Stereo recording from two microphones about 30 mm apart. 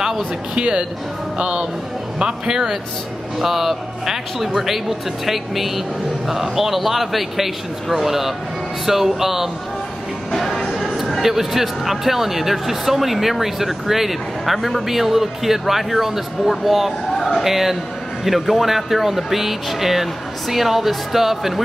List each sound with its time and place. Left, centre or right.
0.2 s a man's voice: right
3.3 s speech: centre
10.3 s music: centre
11.1 s speech: centre